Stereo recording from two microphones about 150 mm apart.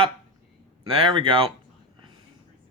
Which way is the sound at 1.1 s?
35° right (ahead or behind).